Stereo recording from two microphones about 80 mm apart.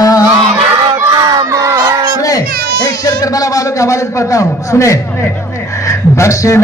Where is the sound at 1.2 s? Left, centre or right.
Right.